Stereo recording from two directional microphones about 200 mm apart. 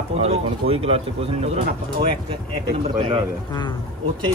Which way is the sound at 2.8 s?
20° right (ahead or behind).